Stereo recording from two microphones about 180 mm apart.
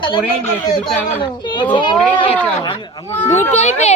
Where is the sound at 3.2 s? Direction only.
40° left (ahead or behind).